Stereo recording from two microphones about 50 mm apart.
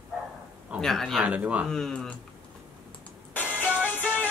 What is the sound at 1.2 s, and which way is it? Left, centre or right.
Speech, right.